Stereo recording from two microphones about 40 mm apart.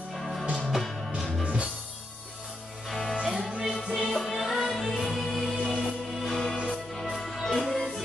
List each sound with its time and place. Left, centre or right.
0.1 s music: centre
1.4 s music: right
2.9 s music: centre
3.3 s music: right
4.0 s music: centre
5.7 s music: centre